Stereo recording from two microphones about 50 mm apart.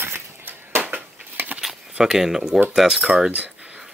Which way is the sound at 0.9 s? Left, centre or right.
Right.